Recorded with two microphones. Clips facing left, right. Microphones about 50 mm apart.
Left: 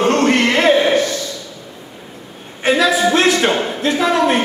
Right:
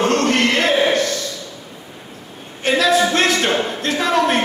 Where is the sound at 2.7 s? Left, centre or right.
Centre.